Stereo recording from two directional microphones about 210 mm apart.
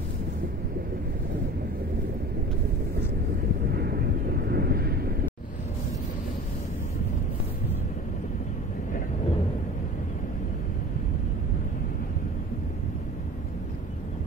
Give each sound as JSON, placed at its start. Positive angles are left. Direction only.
{"t": 3.7, "sound": "vehicle", "side_deg": -50}